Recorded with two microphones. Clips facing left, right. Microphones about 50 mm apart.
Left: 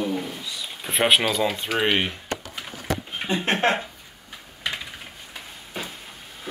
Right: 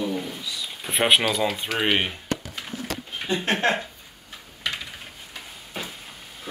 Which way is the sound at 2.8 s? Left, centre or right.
Left.